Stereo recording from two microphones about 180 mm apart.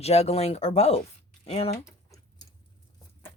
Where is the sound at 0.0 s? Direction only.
35° left (ahead or behind).